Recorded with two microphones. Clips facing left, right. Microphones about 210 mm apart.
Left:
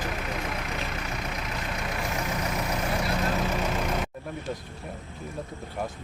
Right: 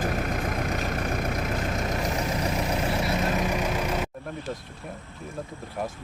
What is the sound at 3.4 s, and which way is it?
Vehicle, 15° right (ahead or behind).